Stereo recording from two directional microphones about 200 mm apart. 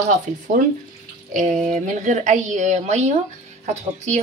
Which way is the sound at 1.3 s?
40° right (ahead or behind).